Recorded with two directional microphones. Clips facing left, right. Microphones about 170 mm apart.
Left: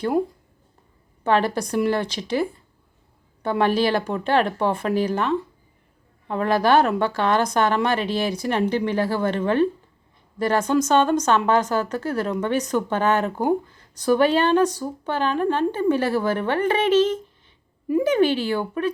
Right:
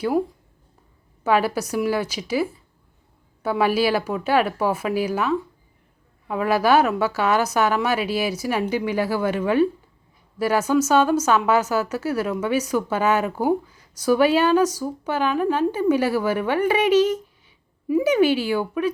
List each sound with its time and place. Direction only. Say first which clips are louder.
0.0 s speech: even; 5° right (ahead or behind)